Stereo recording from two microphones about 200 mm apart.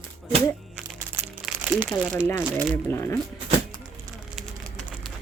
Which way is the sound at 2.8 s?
10° left (ahead or behind).